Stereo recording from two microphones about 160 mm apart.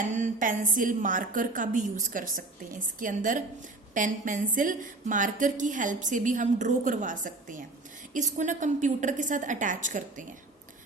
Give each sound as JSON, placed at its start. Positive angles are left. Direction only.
{"t": 0.1, "sound": "a woman's voice", "side_deg": -55}